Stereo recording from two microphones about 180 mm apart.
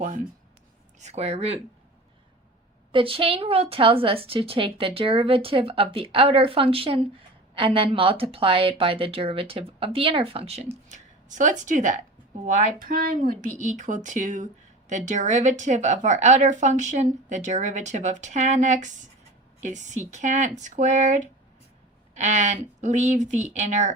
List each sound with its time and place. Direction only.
0.9 s speech: 40° right (ahead or behind)
2.9 s speech: 30° right (ahead or behind)
10.8 s a sound: 45° right (ahead or behind)
11.6 s a woman's voice: 45° right (ahead or behind)